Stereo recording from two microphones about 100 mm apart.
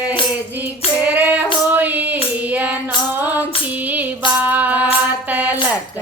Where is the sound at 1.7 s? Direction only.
15° right (ahead or behind).